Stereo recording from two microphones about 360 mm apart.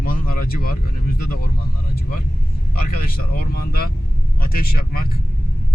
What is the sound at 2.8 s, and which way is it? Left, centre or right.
Speech, left.